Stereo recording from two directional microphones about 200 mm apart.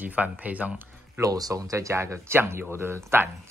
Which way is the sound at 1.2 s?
20° right (ahead or behind).